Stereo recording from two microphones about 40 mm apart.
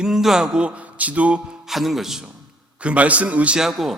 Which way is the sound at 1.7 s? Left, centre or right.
Centre.